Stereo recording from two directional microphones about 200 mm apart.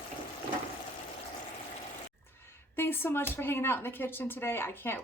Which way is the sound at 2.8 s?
10° left (ahead or behind).